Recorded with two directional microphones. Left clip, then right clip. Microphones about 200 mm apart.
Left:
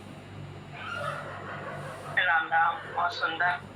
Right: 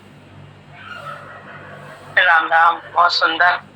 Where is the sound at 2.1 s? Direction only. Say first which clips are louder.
Right 12 dB; 55° right (ahead or behind).